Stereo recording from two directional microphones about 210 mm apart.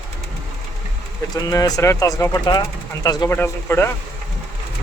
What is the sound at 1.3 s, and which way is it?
Speech, 15° left (ahead or behind).